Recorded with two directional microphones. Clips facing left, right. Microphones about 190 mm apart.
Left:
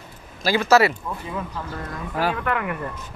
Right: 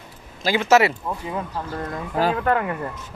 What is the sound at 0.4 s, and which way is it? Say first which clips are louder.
Speech: even; 20° right (ahead or behind).